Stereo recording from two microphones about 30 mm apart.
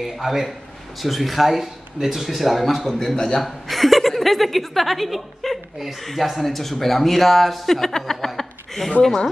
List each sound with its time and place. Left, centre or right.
0.0 s a man's voice: centre
3.4 s speech: centre
7.7 s speech: centre
8.4 s chuckle: centre